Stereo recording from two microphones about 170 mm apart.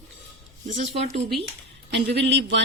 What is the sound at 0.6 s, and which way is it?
Speech, 40° right (ahead or behind).